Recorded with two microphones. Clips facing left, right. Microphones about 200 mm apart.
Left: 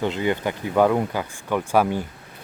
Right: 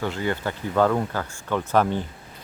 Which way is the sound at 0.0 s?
20° left (ahead or behind).